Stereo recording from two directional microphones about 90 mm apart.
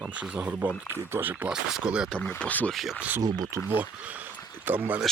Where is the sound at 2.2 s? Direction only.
15° left (ahead or behind).